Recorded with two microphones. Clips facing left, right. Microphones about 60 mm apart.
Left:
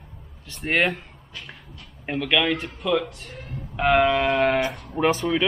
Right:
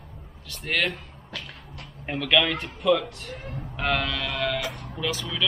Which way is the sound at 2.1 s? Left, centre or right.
Centre.